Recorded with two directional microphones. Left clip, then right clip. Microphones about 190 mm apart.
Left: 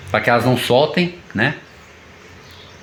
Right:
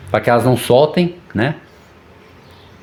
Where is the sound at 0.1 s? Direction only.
70° right (ahead or behind).